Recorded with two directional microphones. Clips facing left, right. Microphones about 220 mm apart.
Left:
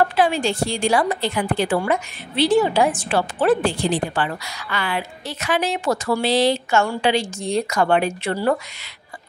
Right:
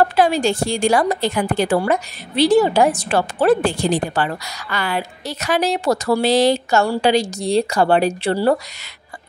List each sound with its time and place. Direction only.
0.1 s a woman's voice: 40° right (ahead or behind)